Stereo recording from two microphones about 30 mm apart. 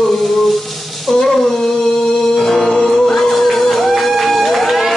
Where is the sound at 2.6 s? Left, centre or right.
Left.